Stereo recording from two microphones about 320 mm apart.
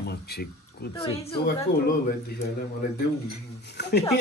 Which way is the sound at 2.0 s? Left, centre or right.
Left.